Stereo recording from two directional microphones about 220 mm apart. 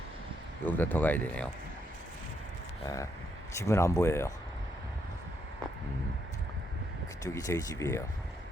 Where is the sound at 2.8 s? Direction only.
15° left (ahead or behind).